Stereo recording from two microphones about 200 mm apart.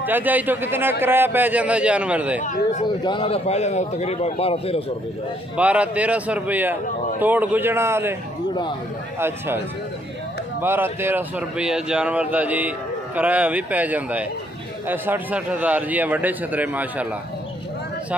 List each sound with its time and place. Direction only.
0.0 s a man's voice: 10° right (ahead or behind)
2.4 s speech: 40° left (ahead or behind)
2.8 s a man's voice: 25° left (ahead or behind)
5.6 s a man's voice: 5° right (ahead or behind)
10.6 s a man's voice: 10° right (ahead or behind)